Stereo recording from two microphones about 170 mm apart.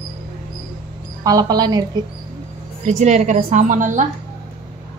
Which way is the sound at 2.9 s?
45° right (ahead or behind).